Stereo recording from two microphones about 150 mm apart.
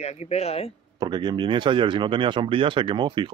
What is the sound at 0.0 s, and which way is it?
Speech, 45° left (ahead or behind).